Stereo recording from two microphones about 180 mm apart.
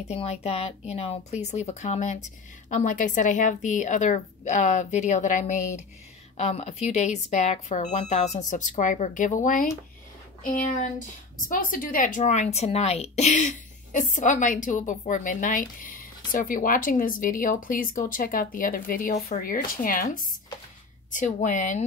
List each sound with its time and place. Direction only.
0.0 s a woman's voice: 35° left (ahead or behind)